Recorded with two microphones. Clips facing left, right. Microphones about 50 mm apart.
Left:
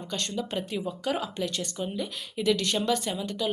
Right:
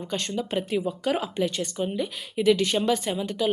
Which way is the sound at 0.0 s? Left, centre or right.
Right.